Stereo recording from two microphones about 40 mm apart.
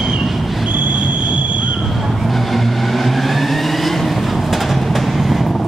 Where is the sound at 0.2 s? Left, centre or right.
Centre.